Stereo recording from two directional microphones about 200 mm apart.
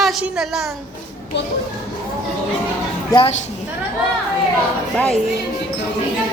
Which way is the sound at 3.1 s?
25° left (ahead or behind).